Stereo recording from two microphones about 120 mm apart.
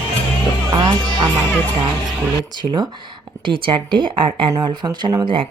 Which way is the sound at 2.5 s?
35° right (ahead or behind).